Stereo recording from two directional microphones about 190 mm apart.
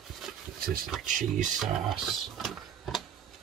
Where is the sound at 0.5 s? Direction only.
50° right (ahead or behind).